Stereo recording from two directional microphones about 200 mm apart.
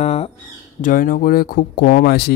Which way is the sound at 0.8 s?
40° left (ahead or behind).